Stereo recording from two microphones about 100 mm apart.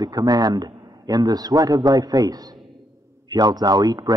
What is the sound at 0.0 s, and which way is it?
A man's voice, 40° right (ahead or behind).